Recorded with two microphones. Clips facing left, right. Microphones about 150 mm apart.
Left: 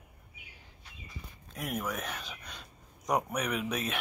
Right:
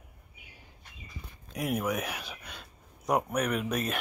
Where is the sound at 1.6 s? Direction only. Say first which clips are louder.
Right 5 dB; 10° right (ahead or behind).